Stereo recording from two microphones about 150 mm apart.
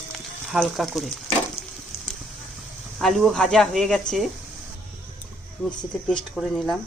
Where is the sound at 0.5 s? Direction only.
Centre (ahead or behind).